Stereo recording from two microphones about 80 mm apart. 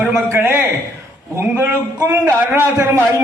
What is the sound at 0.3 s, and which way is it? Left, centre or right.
A man's voice, right.